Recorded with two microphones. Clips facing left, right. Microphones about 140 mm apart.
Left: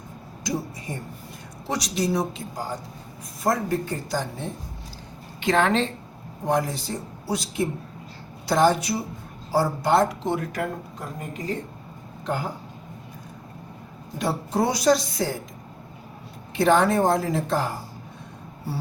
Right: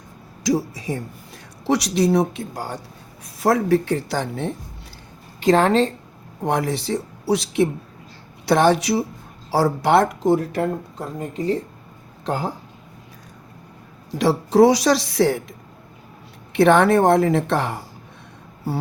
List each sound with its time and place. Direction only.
0.4 s speech: 90° right
1.6 s a woman's voice: 70° right (ahead or behind)
3.4 s speech: 75° right (ahead or behind)
5.4 s speech: 35° right (ahead or behind)
6.4 s speech: 65° right (ahead or behind)
10.2 s speech: 35° right (ahead or behind)
14.2 s a woman's voice: 90° right; by 15.4 s 70° right (ahead or behind)
16.5 s a woman's voice: 65° right (ahead or behind)